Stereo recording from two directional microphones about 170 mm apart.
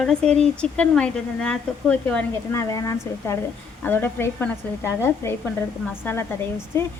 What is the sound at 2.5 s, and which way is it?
A woman's voice, 20° left (ahead or behind).